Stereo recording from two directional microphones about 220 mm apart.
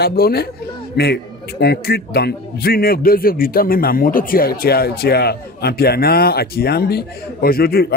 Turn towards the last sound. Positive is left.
turn(degrees=45)  # may be behind; listen again after turning